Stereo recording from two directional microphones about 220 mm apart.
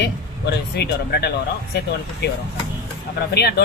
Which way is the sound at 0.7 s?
50° left (ahead or behind).